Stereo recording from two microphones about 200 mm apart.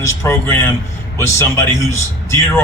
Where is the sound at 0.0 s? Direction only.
15° left (ahead or behind).